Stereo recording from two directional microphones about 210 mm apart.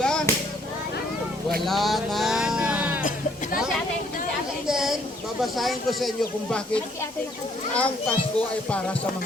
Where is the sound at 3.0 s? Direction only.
40° left (ahead or behind).